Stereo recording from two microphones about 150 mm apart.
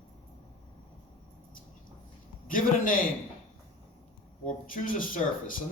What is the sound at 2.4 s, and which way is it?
Speech, 65° left (ahead or behind).